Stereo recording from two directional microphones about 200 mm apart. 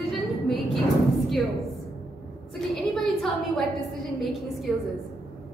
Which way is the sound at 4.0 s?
Centre (ahead or behind).